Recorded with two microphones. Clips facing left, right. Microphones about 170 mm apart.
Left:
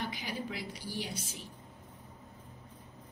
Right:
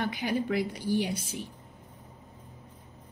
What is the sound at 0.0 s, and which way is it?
A woman's voice, 60° right (ahead or behind).